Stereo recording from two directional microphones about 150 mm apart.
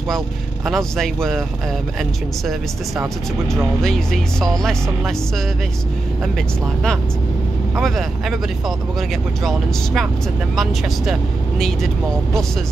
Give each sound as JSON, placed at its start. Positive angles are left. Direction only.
{"t": 0.7, "sound": "speech", "side_deg": 0}
{"t": 3.8, "sound": "speech", "side_deg": 5}
{"t": 7.8, "sound": "speech", "side_deg": 0}